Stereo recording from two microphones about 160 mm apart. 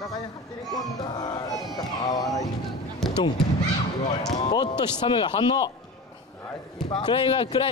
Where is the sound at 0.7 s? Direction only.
25° left (ahead or behind).